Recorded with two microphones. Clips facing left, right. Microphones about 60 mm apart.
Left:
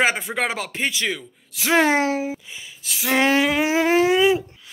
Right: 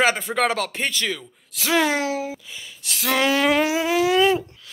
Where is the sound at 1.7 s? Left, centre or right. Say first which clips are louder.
Left 3 dB; left.